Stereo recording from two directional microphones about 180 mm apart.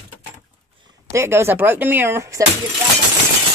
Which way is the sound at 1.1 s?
15° right (ahead or behind).